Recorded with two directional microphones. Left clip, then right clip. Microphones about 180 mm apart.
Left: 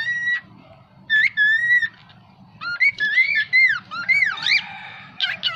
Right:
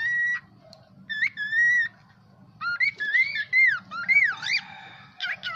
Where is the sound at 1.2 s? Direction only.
20° right (ahead or behind).